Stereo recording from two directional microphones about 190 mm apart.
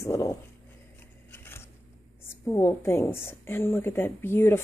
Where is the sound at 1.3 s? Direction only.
10° left (ahead or behind).